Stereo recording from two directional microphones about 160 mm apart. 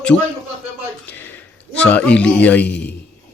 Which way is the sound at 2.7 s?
90° left.